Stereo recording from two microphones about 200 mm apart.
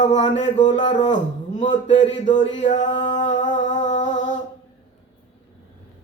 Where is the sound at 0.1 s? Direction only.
30° left (ahead or behind).